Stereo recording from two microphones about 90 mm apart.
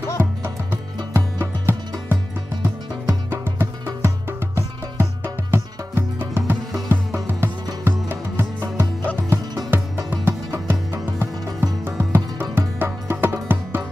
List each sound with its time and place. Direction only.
0.2 s music: 25° right (ahead or behind)